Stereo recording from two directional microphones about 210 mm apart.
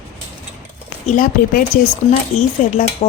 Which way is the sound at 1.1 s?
40° left (ahead or behind).